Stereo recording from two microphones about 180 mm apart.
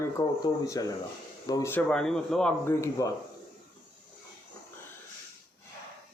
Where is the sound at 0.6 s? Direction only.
20° left (ahead or behind).